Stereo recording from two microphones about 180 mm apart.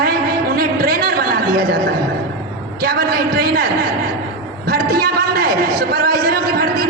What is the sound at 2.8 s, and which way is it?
A man's voice, 55° right (ahead or behind).